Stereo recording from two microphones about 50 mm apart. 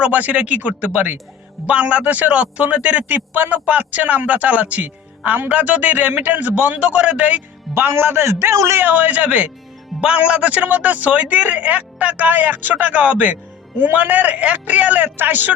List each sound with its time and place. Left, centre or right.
0.0 s a woman's voice: right
7.7 s a man's voice: right
8.8 s a woman's voice: right